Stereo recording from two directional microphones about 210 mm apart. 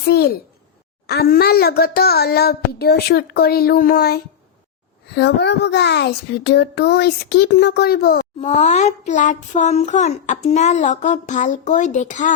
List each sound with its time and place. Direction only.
0.1 s speech: 45° left (ahead or behind)
8.4 s a child's voice: 30° left (ahead or behind)